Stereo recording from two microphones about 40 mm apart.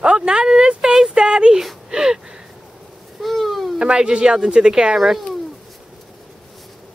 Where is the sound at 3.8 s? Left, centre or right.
Right.